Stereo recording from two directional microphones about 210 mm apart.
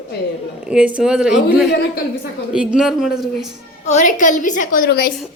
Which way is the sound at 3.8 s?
35° left (ahead or behind).